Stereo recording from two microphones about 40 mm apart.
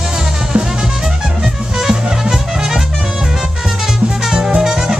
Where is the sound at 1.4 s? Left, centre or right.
Centre.